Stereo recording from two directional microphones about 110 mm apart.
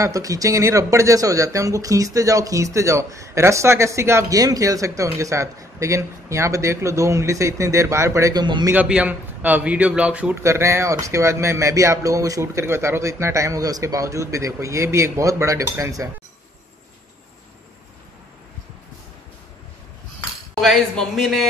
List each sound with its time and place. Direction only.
0.0 s speech: 30° right (ahead or behind)
8.7 s a man's voice: 10° right (ahead or behind)
10.4 s speech: 25° right (ahead or behind)
20.6 s a man's voice: centre (ahead or behind)